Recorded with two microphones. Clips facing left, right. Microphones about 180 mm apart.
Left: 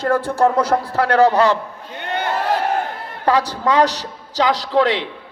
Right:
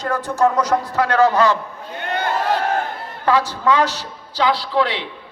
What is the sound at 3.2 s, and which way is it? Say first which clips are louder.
A man's voice: even; 35° left (ahead or behind).